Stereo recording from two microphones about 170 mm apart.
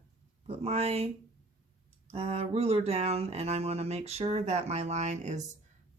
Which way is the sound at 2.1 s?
35° right (ahead or behind).